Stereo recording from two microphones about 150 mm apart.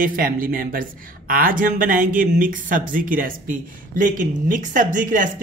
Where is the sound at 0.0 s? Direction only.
70° right (ahead or behind).